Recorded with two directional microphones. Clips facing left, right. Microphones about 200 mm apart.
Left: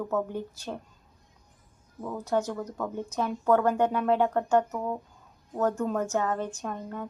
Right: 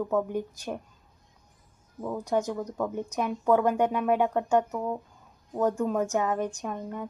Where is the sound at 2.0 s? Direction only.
15° right (ahead or behind).